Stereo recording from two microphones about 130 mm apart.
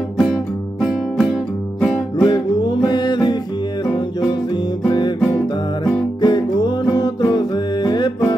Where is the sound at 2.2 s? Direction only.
35° left (ahead or behind).